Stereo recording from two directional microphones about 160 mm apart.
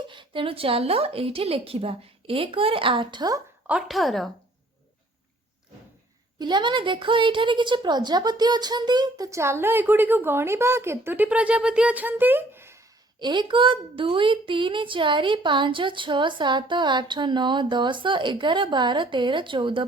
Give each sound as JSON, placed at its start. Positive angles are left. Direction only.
{"t": 0.1, "sound": "a woman's voice", "side_deg": -30}
{"t": 3.7, "sound": "a woman's voice", "side_deg": -5}
{"t": 6.4, "sound": "a woman's voice", "side_deg": -30}
{"t": 13.1, "sound": "a woman's voice", "side_deg": -30}